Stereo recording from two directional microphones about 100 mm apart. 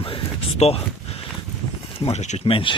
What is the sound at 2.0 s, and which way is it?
Speech, 75° left (ahead or behind).